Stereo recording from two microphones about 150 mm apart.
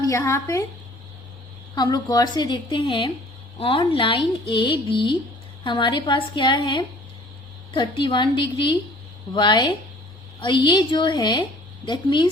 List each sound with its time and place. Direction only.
0.0 s a woman's voice: 20° left (ahead or behind)
1.7 s a woman's voice: 30° left (ahead or behind)